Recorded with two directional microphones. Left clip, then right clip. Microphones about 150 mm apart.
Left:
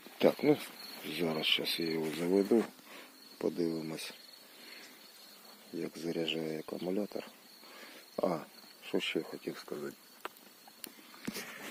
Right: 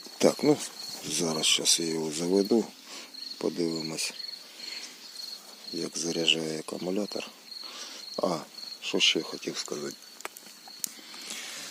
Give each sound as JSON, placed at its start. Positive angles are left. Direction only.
{"t": 0.2, "sound": "speech", "side_deg": -20}
{"t": 1.0, "sound": "speech", "side_deg": -5}
{"t": 5.7, "sound": "speech", "side_deg": -5}
{"t": 7.8, "sound": "cricket", "side_deg": 0}
{"t": 8.9, "sound": "speech", "side_deg": -5}